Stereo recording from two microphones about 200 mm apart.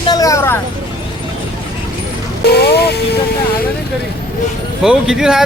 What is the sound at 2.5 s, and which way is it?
Speech, 50° left (ahead or behind).